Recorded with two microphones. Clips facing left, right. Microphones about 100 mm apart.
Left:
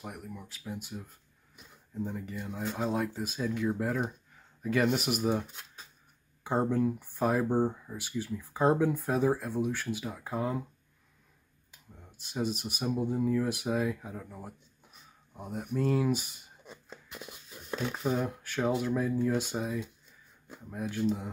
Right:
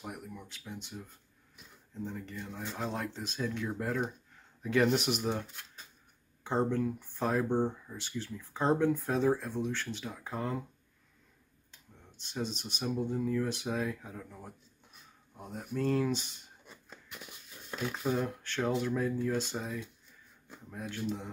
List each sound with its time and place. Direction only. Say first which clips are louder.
0.0 s speech: left 1 dB; centre (ahead or behind)
11.7 s speech: left 3 dB; 10° left (ahead or behind)
16.6 s a sound: left 5 dB; 25° left (ahead or behind)
17.9 s speech: even; 5° left (ahead or behind)